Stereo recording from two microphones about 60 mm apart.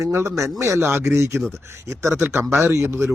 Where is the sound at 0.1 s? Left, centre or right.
Right.